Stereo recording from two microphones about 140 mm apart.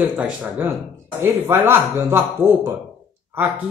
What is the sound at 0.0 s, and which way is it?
Speech, 10° right (ahead or behind).